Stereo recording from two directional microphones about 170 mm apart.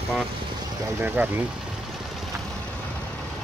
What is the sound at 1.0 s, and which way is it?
Speech, 10° right (ahead or behind).